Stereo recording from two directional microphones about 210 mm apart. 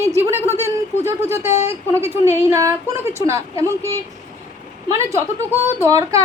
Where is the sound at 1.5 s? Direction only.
30° left (ahead or behind).